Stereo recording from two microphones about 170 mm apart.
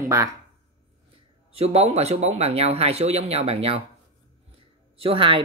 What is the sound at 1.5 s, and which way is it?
Speech, 35° right (ahead or behind).